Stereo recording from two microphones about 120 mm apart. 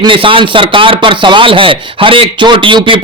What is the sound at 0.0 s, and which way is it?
Speech, 45° right (ahead or behind).